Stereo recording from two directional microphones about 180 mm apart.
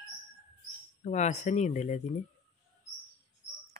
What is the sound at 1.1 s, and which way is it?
Speech, 40° left (ahead or behind).